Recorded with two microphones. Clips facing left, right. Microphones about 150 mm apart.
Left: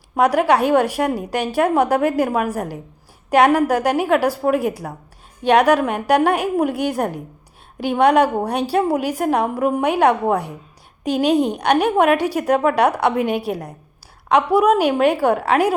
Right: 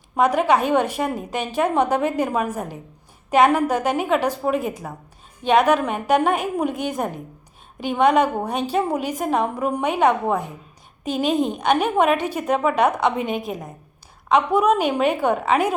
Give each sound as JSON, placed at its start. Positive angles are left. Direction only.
{"t": 0.2, "sound": "a woman's voice", "side_deg": 10}
{"t": 13.5, "sound": "a woman's voice", "side_deg": 75}
{"t": 14.3, "sound": "a woman's voice", "side_deg": 10}